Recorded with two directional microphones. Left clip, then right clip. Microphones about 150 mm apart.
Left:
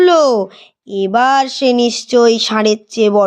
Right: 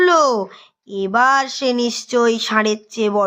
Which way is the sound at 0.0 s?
25° left (ahead or behind).